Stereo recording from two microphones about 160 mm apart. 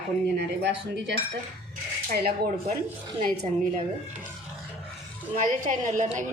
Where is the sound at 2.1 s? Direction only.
75° right (ahead or behind).